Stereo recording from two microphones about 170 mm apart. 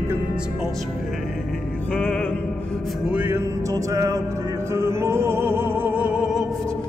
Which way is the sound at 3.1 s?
10° right (ahead or behind).